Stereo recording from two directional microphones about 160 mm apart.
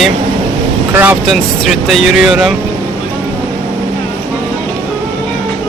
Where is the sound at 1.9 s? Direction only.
Centre (ahead or behind).